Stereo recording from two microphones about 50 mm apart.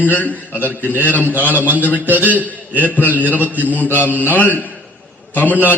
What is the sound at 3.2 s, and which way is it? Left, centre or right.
A man's voice, left.